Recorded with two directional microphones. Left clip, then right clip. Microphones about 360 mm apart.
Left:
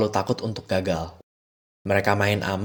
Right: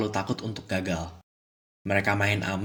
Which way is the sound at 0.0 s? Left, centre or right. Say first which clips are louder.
Left 6 dB; left.